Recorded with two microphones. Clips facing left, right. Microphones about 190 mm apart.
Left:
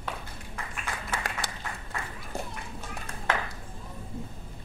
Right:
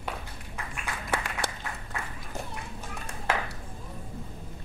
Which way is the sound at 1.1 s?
60° right (ahead or behind).